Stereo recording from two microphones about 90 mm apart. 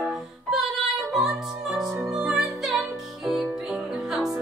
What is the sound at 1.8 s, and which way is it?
Music, 35° right (ahead or behind).